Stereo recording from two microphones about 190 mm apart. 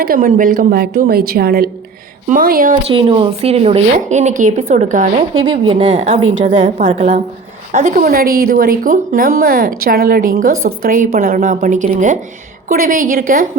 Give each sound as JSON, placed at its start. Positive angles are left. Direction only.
{"t": 0.0, "sound": "a woman's voice", "side_deg": -50}
{"t": 2.8, "sound": "a woman's voice", "side_deg": -30}
{"t": 5.4, "sound": "a woman's voice", "side_deg": -25}
{"t": 5.9, "sound": "a woman's voice", "side_deg": -40}
{"t": 10.5, "sound": "a woman's voice", "side_deg": -90}
{"t": 10.8, "sound": "a woman's voice", "side_deg": -45}